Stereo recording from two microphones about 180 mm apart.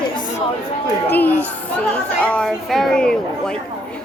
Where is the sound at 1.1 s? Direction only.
10° left (ahead or behind).